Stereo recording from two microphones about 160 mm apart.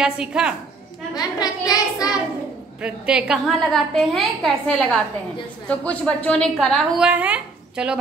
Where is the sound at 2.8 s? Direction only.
5° right (ahead or behind).